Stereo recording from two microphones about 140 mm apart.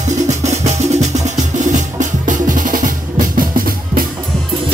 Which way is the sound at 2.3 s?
75° right (ahead or behind).